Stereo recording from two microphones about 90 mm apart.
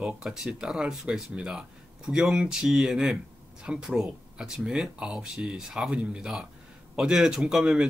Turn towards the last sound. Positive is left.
turn(degrees=-5)  # may be behind; listen again after turning